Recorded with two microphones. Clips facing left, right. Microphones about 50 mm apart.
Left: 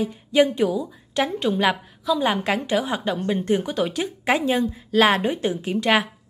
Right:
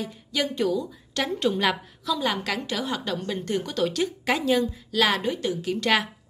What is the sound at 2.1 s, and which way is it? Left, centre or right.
A woman's voice, left.